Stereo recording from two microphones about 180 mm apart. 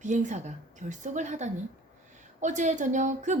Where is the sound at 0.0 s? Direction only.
40° right (ahead or behind).